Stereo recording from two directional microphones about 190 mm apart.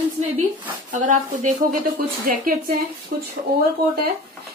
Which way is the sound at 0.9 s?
40° right (ahead or behind).